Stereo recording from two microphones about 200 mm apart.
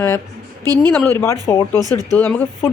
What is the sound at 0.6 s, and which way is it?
Speech, 20° right (ahead or behind).